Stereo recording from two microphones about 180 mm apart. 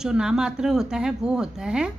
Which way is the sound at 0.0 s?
5° right (ahead or behind).